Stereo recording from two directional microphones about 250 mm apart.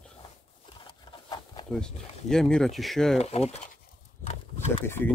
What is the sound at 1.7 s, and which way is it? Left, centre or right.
Speech, centre.